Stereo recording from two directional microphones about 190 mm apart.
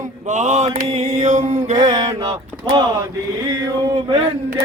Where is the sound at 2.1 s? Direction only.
25° right (ahead or behind).